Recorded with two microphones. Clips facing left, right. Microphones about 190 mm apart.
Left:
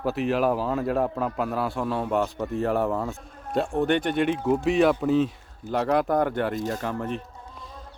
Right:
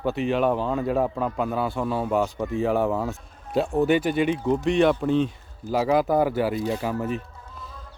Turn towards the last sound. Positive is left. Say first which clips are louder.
# right 3 dB
turn(degrees=-5)  # may be behind; listen again after turning